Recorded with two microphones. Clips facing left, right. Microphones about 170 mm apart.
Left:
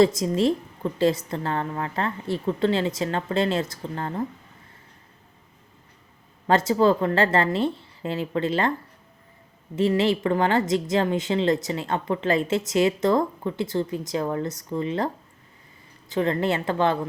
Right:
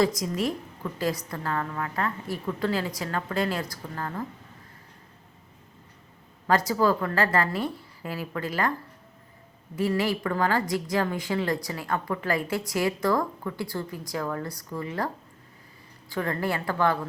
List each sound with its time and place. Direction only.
0.0 s a woman's voice: 25° left (ahead or behind)
6.5 s a woman's voice: 25° left (ahead or behind)
9.7 s a woman's voice: 25° left (ahead or behind)